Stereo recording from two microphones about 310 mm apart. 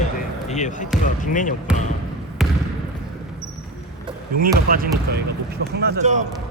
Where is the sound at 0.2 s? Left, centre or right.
Left.